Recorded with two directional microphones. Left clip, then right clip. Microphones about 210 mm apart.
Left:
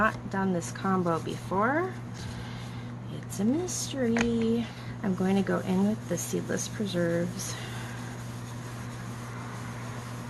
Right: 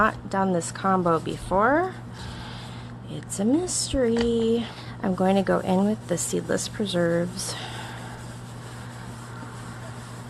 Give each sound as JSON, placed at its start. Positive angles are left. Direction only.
{"t": 0.0, "sound": "speech", "side_deg": -50}
{"t": 3.4, "sound": "speech", "side_deg": -50}